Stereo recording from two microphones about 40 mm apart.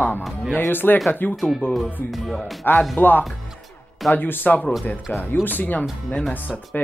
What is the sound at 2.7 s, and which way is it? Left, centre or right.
Speech, left.